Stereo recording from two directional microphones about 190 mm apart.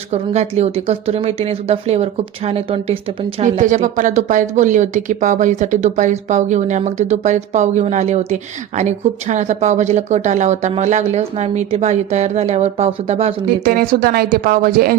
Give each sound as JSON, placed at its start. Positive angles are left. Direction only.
{"t": 0.1, "sound": "a woman's voice", "side_deg": -35}
{"t": 3.4, "sound": "a woman's voice", "side_deg": -40}
{"t": 13.7, "sound": "speech", "side_deg": -50}